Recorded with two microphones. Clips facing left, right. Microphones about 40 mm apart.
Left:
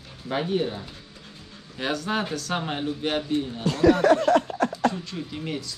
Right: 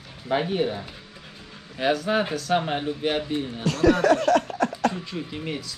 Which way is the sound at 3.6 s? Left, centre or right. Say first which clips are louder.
Left 1 dB; right.